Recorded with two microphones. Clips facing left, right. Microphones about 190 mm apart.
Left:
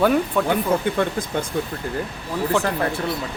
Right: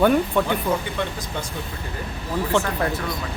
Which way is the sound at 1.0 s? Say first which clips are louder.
Left 5 dB; 50° left (ahead or behind).